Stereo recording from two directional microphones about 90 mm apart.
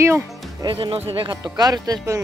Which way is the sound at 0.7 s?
80° right.